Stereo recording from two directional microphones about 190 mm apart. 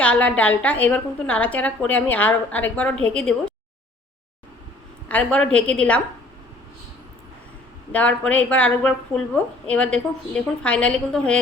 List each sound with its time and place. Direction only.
0.0 s a woman's voice: 5° left (ahead or behind)
5.0 s a woman's voice: 5° left (ahead or behind)
7.9 s a woman's voice: 5° left (ahead or behind)